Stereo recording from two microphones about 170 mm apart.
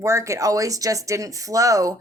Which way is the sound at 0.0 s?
15° right (ahead or behind).